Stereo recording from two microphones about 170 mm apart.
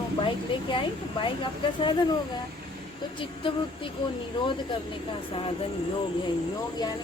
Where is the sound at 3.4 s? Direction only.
30° left (ahead or behind).